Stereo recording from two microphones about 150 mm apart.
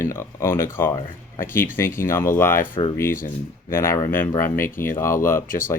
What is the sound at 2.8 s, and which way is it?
Speech, 35° left (ahead or behind).